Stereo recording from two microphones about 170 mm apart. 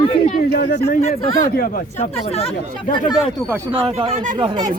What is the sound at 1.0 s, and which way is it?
Speech, 40° left (ahead or behind).